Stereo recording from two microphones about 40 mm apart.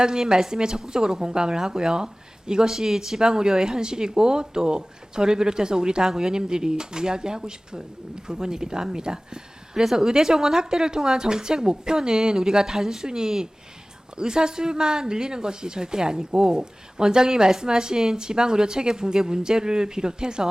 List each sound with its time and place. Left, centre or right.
0.0 s speech: centre